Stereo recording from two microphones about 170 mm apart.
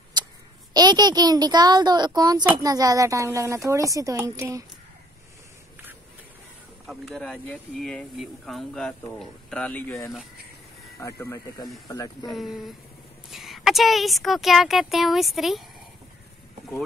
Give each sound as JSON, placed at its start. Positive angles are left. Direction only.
{"t": 0.2, "sound": "a sound", "side_deg": -25}
{"t": 0.7, "sound": "a woman's voice", "side_deg": -25}
{"t": 6.9, "sound": "speech", "side_deg": 0}
{"t": 12.3, "sound": "speech", "side_deg": 0}